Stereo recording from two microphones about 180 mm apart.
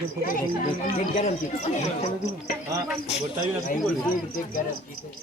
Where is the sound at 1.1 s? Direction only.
40° left (ahead or behind).